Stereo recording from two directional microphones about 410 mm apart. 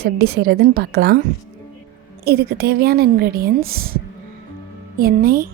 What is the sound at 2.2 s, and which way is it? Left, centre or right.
A woman's voice, right.